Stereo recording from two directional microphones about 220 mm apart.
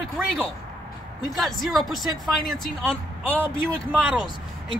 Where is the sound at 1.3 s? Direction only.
Centre (ahead or behind).